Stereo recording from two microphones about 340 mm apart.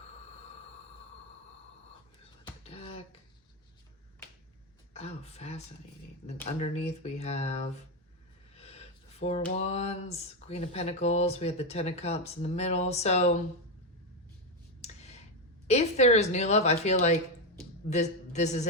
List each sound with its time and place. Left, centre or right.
2.4 s finger snapping: centre
4.9 s speech: centre
14.8 s a sound: centre
15.6 s a woman's voice: centre